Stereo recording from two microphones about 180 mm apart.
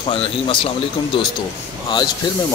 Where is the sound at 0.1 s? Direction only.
30° left (ahead or behind).